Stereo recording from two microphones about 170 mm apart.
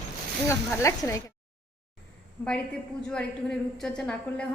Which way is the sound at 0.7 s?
20° left (ahead or behind).